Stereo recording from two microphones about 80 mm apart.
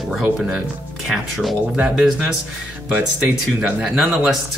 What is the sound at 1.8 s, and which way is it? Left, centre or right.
Speech, centre.